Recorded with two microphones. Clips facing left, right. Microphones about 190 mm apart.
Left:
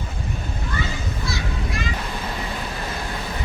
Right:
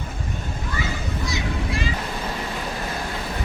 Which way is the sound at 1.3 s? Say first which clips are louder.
Right 2 dB; 30° right (ahead or behind).